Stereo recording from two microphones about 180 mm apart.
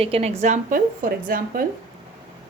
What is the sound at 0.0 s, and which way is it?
A woman's voice, 35° right (ahead or behind).